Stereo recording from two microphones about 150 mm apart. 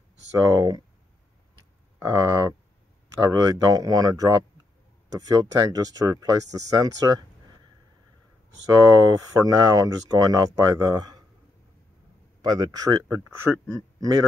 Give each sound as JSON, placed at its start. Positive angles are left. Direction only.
{"t": 0.4, "sound": "speech", "side_deg": -20}
{"t": 2.0, "sound": "speech", "side_deg": -20}
{"t": 8.6, "sound": "speech", "side_deg": -25}
{"t": 12.4, "sound": "speech", "side_deg": -25}